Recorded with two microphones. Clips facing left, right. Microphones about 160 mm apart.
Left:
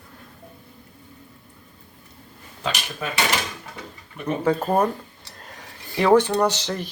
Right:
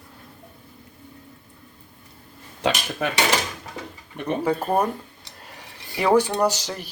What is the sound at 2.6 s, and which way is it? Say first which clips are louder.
Speech: right 5 dB; 75° right (ahead or behind).